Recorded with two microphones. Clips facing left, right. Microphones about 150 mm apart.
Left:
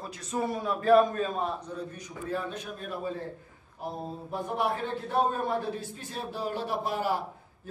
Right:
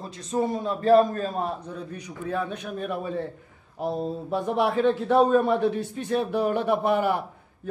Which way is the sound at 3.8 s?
85° right.